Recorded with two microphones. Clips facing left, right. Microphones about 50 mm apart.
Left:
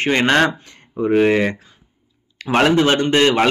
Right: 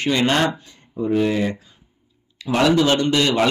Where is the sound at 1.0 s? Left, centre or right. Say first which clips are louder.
Left 5 dB; left.